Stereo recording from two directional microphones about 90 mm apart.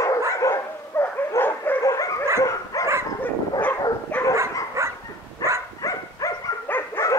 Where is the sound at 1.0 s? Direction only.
25° left (ahead or behind).